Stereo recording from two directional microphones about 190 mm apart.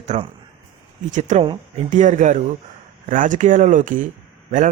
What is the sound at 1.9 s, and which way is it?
A man's voice, 40° right (ahead or behind).